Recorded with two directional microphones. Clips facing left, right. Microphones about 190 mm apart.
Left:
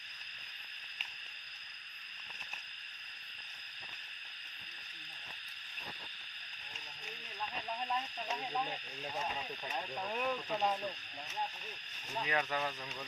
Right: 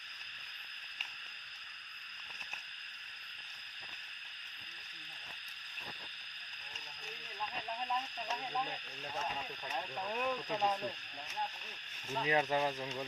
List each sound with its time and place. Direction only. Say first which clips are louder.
7.8 s a sound: even; centre (ahead or behind)
8.3 s stir: left 1 dB; 10° left (ahead or behind)
9.6 s speech: even; 5° left (ahead or behind)
12.2 s speech: right 4 dB; 25° right (ahead or behind)